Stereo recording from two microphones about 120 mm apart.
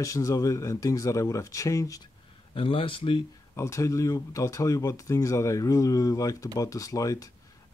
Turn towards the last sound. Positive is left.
turn(degrees=30)  # may be behind; listen again after turning